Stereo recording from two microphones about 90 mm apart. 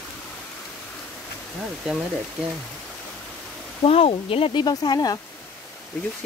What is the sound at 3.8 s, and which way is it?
Speech, 90° left.